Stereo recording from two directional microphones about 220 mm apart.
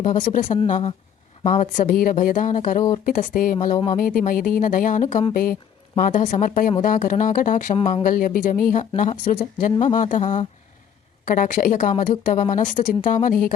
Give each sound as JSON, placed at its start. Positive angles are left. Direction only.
{"t": 0.0, "sound": "a woman's voice", "side_deg": 35}
{"t": 0.4, "sound": "a woman's voice", "side_deg": 20}
{"t": 7.8, "sound": "speech", "side_deg": 25}
{"t": 8.0, "sound": "a woman's voice", "side_deg": 40}